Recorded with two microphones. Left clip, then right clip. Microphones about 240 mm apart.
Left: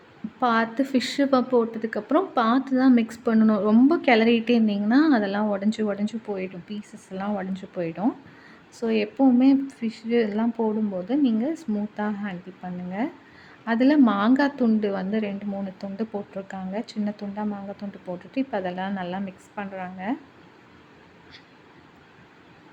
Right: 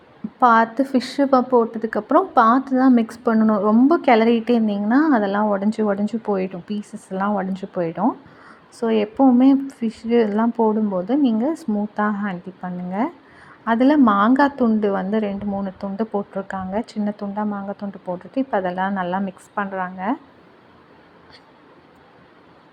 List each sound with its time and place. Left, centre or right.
0.3 s a woman's voice: centre